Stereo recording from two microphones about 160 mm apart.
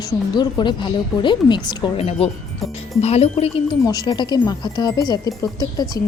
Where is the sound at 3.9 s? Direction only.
25° left (ahead or behind).